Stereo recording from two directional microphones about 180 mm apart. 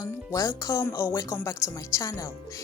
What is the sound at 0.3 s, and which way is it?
Speech, 15° left (ahead or behind).